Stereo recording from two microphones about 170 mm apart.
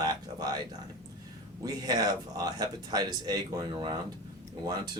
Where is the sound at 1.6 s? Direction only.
25° right (ahead or behind).